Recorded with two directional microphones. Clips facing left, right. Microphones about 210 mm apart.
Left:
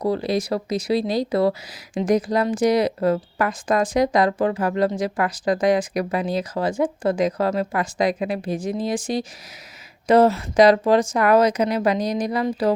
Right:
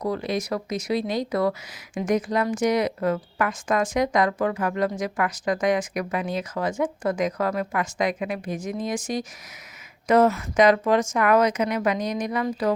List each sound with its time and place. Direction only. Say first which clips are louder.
0.0 s a woman's voice: left 4 dB; 30° left (ahead or behind)